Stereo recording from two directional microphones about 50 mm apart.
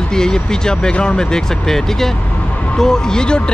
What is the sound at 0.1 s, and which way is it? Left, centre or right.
Speech, centre.